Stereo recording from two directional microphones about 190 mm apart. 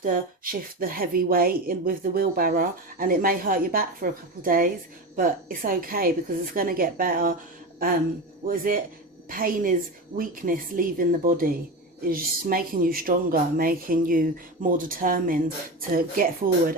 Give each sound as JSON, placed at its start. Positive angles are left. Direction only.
{"t": 0.0, "sound": "speech", "side_deg": -50}
{"t": 8.4, "sound": "speech", "side_deg": -50}